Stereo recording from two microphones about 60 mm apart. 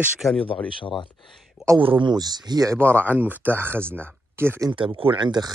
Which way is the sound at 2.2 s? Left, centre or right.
Right.